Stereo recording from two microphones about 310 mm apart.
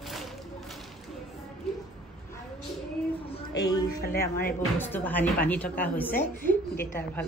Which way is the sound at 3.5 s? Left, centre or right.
Centre.